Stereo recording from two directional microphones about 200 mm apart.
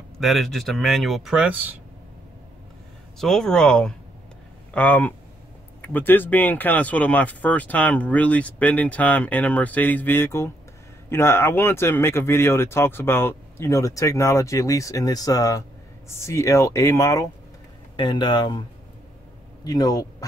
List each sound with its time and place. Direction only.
0.2 s speech: centre (ahead or behind)
3.2 s a man's voice: centre (ahead or behind); by 20.2 s 20° left (ahead or behind)